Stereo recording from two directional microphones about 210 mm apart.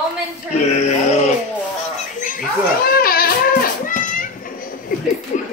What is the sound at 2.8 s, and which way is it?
Goat, 45° left (ahead or behind).